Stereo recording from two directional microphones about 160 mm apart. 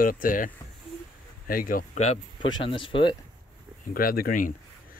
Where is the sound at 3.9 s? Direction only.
65° left (ahead or behind).